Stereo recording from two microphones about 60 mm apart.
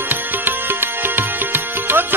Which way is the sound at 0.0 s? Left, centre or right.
Right.